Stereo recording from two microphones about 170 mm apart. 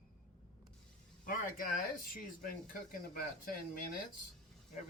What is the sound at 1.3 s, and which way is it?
Speech, 55° left (ahead or behind).